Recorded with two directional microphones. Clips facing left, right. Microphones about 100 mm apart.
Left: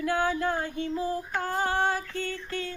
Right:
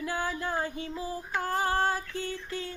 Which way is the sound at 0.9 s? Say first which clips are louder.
Left 6 dB; 35° left (ahead or behind).